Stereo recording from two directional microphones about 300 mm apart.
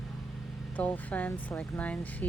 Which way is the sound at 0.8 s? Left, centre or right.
Centre.